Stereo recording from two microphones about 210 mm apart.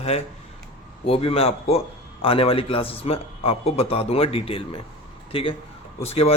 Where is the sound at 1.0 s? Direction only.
25° left (ahead or behind).